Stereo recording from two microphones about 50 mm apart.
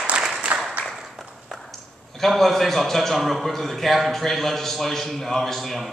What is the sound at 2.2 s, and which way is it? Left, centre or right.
A man's voice, centre.